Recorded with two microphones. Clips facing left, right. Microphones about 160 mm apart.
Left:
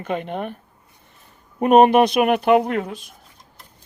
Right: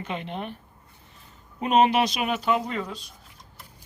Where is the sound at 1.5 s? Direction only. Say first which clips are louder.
Left 8 dB; 55° left (ahead or behind).